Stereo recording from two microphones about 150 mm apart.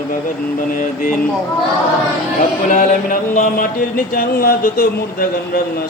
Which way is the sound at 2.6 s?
60° left (ahead or behind).